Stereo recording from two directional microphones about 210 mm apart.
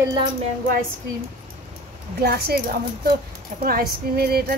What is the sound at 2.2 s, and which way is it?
Speech, 50° right (ahead or behind).